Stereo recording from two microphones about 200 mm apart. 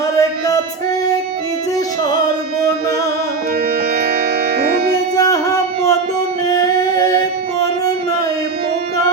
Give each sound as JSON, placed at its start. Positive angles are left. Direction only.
{"t": 0.2, "sound": "music", "side_deg": 15}
{"t": 4.5, "sound": "music", "side_deg": -50}
{"t": 5.1, "sound": "music", "side_deg": 15}